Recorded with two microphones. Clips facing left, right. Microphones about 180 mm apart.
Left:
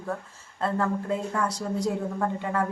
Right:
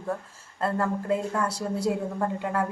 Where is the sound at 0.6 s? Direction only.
5° right (ahead or behind).